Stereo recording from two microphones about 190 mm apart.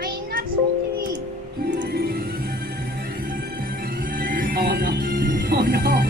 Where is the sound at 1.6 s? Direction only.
60° right (ahead or behind).